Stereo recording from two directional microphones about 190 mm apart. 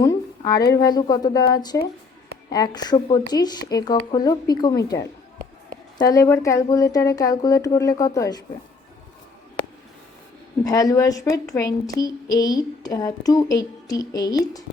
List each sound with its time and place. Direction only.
0.0 s a woman's voice: 20° left (ahead or behind)
10.6 s a woman's voice: 20° left (ahead or behind)